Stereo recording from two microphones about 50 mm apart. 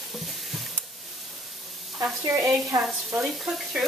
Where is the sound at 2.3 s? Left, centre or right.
Right.